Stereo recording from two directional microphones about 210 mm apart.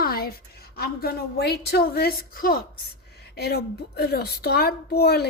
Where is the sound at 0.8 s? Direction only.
50° left (ahead or behind).